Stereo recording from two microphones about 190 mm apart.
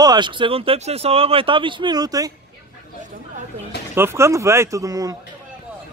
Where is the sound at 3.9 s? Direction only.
15° right (ahead or behind).